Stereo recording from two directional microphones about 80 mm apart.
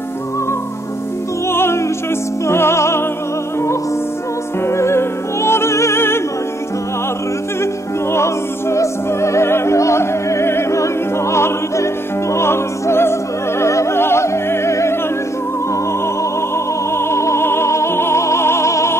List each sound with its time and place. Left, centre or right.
1.5 s music: left
4.6 s music: left
8.1 s music: left
16.9 s music: left